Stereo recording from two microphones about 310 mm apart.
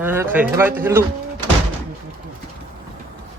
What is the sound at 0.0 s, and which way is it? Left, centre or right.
Speech, centre.